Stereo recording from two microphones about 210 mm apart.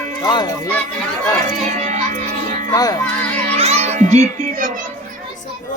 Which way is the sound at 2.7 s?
15° left (ahead or behind).